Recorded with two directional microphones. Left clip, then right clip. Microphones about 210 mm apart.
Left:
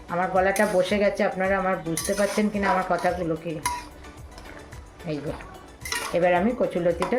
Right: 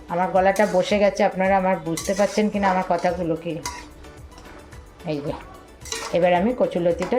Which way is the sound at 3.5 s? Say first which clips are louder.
Right 3 dB; 20° left (ahead or behind).